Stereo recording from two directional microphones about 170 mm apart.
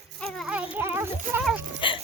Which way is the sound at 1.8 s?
30° left (ahead or behind).